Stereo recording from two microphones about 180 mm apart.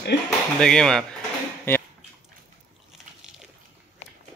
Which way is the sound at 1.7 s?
15° left (ahead or behind).